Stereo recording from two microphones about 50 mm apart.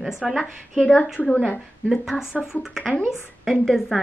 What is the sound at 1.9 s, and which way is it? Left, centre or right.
Speech, centre.